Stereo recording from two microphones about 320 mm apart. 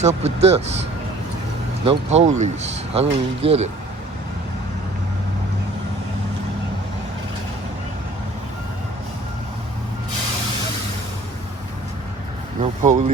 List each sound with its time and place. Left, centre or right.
0.0 s speech: centre
1.8 s speech: centre
12.5 s speech: right